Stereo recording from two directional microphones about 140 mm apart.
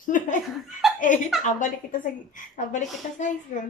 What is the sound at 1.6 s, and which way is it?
A woman's voice, 65° left (ahead or behind).